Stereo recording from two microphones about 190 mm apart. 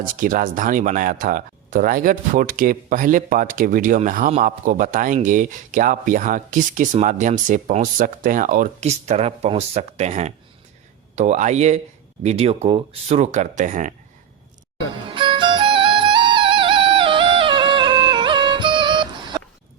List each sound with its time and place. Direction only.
0.0 s speech: 45° right (ahead or behind)
15.1 s music: 25° right (ahead or behind)